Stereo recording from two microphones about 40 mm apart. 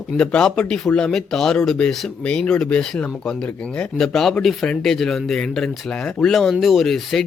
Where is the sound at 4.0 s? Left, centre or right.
Centre.